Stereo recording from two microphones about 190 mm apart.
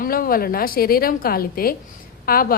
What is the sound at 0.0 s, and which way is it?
A woman's voice, 50° left (ahead or behind).